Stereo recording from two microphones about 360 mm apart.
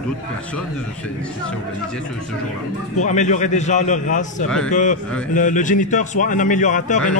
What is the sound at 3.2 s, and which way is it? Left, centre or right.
A man's voice, centre.